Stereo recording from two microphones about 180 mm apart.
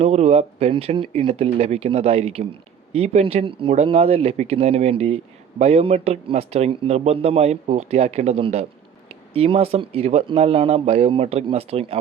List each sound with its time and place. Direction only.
0.0 s speech: 35° right (ahead or behind)